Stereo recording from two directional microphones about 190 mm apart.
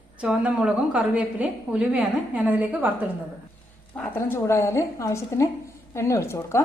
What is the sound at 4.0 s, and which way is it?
Speech, 10° left (ahead or behind).